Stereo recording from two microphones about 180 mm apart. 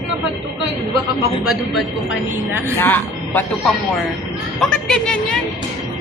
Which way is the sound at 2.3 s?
10° right (ahead or behind).